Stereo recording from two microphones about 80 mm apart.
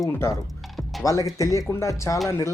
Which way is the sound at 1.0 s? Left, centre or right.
Left.